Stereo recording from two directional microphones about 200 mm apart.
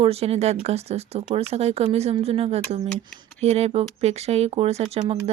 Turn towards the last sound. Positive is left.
turn(degrees=-30)  # may be behind; listen again after turning